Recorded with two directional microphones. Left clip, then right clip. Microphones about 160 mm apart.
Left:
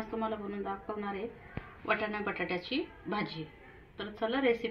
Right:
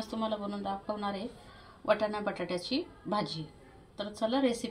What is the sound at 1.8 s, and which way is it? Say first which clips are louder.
Speech: right 3 dB; 90° right.